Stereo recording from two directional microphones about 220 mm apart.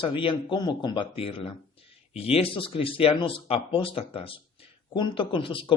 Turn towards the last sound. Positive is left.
turn(degrees=25)  # may be behind; listen again after turning